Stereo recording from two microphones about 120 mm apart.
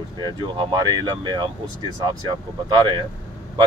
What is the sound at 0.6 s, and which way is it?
Speech, 35° right (ahead or behind).